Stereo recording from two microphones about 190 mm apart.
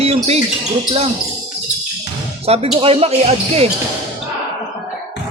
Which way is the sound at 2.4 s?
30° right (ahead or behind).